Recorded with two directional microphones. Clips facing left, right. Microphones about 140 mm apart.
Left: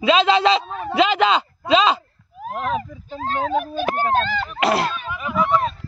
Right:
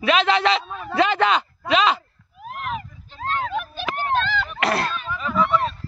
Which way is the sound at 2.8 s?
40° left (ahead or behind).